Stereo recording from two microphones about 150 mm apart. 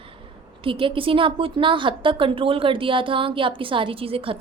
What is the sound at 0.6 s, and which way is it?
A woman's voice, 35° right (ahead or behind).